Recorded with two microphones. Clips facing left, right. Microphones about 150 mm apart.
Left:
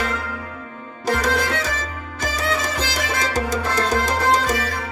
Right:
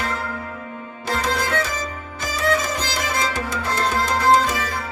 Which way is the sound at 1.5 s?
50° right (ahead or behind).